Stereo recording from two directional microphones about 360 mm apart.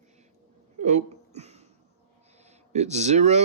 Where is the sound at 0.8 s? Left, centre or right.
Centre.